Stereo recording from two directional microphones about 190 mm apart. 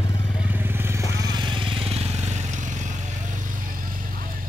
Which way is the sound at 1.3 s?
25° right (ahead or behind).